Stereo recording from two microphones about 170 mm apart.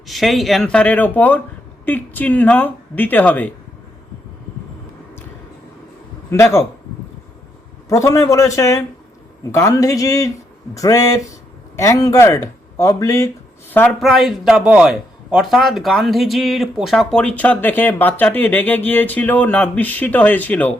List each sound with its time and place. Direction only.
0.1 s speech: centre (ahead or behind)
6.3 s speech: 15° left (ahead or behind)
7.9 s speech: 20° left (ahead or behind)
14.0 s speech: centre (ahead or behind)